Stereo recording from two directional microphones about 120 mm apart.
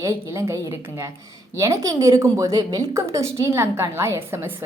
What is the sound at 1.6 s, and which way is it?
A woman's voice, 25° right (ahead or behind).